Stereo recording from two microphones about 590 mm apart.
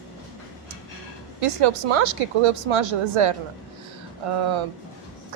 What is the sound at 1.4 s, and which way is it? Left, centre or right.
A woman's voice, right.